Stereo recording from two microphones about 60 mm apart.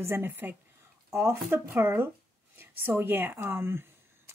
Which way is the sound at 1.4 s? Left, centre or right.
Right.